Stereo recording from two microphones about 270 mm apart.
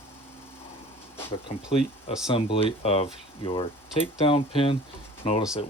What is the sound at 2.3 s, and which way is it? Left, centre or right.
Speech, left.